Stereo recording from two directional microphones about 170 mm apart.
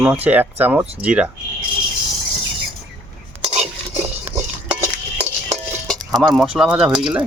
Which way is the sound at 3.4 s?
40° right (ahead or behind).